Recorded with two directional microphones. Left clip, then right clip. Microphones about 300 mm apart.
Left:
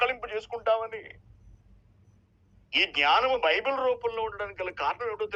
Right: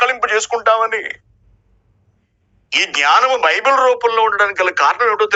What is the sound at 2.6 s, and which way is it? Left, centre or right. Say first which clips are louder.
Speech: right 10 dB; right.